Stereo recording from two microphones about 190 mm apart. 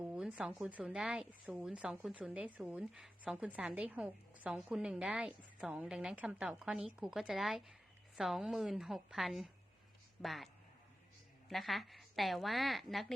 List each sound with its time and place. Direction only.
0.0 s a woman's voice: 5° right (ahead or behind)